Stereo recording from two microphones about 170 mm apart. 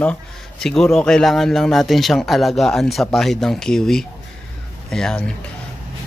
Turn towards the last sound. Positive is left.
turn(degrees=5)  # may be behind; listen again after turning